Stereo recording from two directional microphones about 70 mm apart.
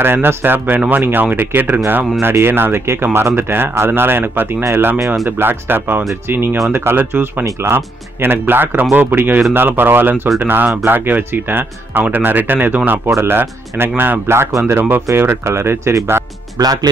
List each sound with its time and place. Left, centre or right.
0.0 s speech: right
16.5 s speech: right